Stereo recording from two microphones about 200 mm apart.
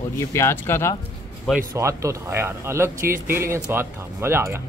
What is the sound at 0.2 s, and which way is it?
Speech, 15° left (ahead or behind).